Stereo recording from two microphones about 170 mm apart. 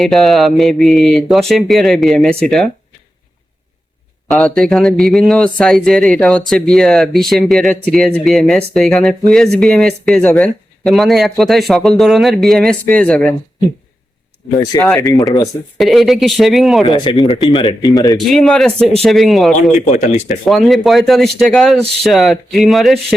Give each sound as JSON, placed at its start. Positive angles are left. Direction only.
{"t": 0.0, "sound": "a man's voice", "side_deg": 0}
{"t": 4.3, "sound": "a man's voice", "side_deg": 5}
{"t": 14.5, "sound": "speech", "side_deg": 20}
{"t": 15.8, "sound": "a man's voice", "side_deg": 0}
{"t": 16.8, "sound": "speech", "side_deg": 30}
{"t": 18.2, "sound": "a man's voice", "side_deg": 0}
{"t": 19.9, "sound": "speech", "side_deg": 45}
{"t": 20.4, "sound": "a man's voice", "side_deg": 0}